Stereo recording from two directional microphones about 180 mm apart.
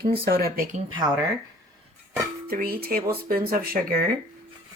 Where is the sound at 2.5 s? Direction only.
55° right (ahead or behind).